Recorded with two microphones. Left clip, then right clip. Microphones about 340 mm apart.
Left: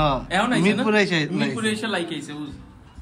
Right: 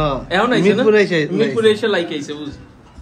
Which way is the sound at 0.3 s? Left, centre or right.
Left.